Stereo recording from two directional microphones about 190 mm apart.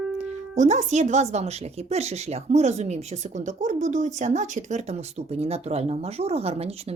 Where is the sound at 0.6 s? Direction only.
40° right (ahead or behind).